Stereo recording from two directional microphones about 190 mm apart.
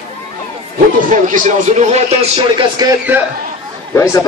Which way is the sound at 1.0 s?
45° right (ahead or behind).